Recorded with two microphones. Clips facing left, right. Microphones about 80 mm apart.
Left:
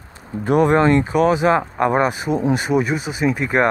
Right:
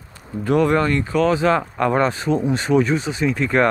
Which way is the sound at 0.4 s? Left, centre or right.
Left.